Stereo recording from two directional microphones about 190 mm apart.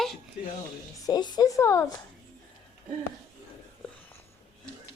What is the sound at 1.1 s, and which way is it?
Speech, 20° left (ahead or behind).